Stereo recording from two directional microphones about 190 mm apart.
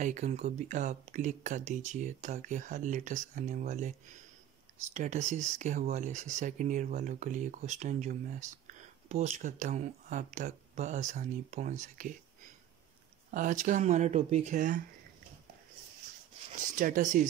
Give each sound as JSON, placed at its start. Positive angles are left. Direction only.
{"t": 0.0, "sound": "speech", "side_deg": -40}
{"t": 4.9, "sound": "speech", "side_deg": -40}
{"t": 13.3, "sound": "speech", "side_deg": -40}
{"t": 16.7, "sound": "speech", "side_deg": -45}